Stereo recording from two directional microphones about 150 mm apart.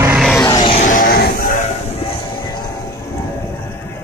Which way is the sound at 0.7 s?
60° left (ahead or behind).